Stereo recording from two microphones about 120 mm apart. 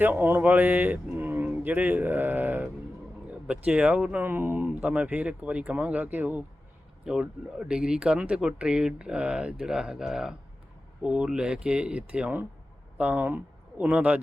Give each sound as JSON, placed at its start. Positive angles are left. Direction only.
{"t": 0.0, "sound": "speech", "side_deg": -15}
{"t": 3.7, "sound": "speech", "side_deg": -10}